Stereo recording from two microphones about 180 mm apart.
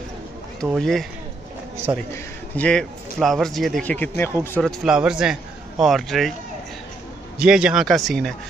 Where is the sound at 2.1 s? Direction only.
10° left (ahead or behind).